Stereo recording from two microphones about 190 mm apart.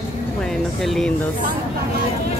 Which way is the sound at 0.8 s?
Centre (ahead or behind).